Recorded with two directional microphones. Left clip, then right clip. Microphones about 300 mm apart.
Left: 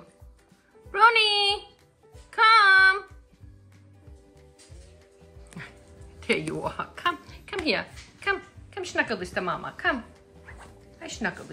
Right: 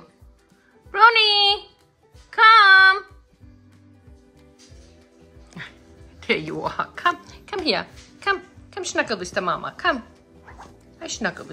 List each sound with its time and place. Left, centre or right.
0.9 s music: centre
5.5 s music: centre